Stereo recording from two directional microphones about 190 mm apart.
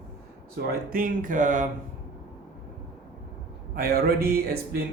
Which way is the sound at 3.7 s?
55° right (ahead or behind).